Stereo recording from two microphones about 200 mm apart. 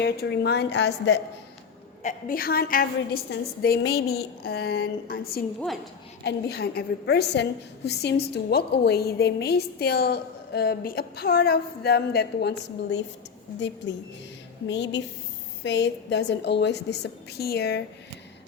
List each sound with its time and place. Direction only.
0.0 s a woman's voice: 55° left (ahead or behind)
2.0 s a woman's voice: 45° left (ahead or behind)
5.5 s a woman's voice: centre (ahead or behind)
6.2 s a woman's voice: 55° left (ahead or behind)
14.7 s a woman's voice: 60° left (ahead or behind)